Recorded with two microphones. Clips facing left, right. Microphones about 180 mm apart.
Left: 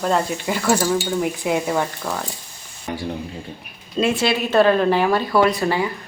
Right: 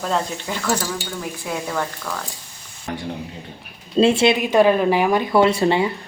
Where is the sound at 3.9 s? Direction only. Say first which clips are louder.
Right 4 dB; 25° right (ahead or behind).